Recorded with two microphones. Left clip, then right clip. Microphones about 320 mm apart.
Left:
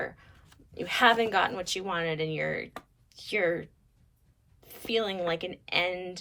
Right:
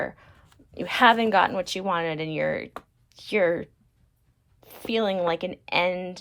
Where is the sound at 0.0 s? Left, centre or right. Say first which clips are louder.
Right 5 dB; centre.